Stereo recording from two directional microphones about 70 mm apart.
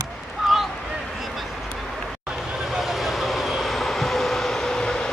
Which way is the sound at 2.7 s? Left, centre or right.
Centre.